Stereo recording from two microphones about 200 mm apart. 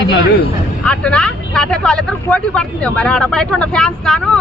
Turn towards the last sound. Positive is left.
turn(degrees=5)  # may be behind; listen again after turning